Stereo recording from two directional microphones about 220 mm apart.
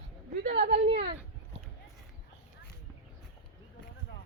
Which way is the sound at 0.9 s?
30° right (ahead or behind).